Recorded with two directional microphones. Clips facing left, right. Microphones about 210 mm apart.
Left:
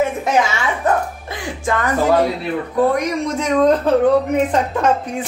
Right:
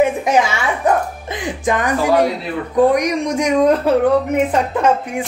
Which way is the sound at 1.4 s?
15° right (ahead or behind).